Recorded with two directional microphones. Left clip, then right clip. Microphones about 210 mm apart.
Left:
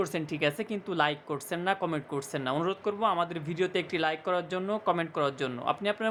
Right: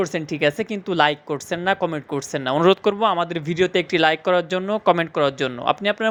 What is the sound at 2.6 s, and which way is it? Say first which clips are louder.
Speech: right 14 dB; 35° right (ahead or behind).